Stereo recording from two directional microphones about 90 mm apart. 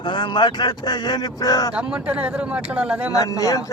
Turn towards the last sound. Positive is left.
turn(degrees=40)  # may be behind; listen again after turning